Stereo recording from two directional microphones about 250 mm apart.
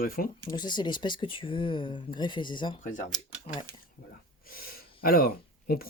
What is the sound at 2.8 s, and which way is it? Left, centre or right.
Speech, left.